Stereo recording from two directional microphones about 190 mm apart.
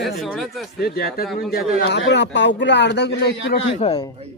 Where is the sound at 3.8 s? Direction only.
30° left (ahead or behind).